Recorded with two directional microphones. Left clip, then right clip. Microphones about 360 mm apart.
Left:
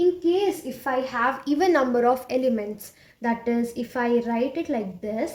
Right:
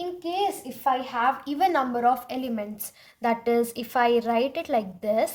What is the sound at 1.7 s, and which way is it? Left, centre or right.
A woman's voice, right.